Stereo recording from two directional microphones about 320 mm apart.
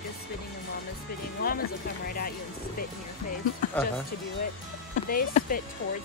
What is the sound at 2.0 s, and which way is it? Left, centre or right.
Speech, left.